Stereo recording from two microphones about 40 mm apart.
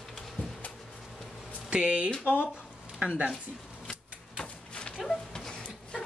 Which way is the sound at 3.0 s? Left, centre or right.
Right.